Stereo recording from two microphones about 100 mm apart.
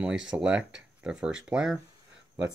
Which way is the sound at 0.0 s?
10° right (ahead or behind).